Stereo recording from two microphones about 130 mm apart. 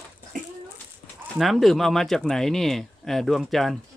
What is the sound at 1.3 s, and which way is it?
Speech, centre (ahead or behind).